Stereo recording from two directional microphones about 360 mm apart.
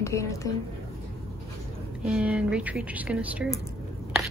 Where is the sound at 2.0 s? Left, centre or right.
Centre.